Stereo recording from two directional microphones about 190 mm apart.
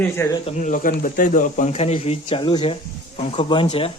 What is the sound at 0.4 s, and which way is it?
Speech, 40° left (ahead or behind).